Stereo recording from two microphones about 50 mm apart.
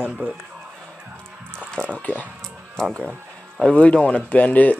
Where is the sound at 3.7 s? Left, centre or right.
Left.